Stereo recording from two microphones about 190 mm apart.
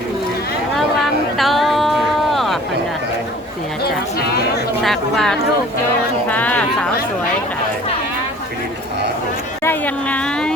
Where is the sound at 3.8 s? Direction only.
55° left (ahead or behind).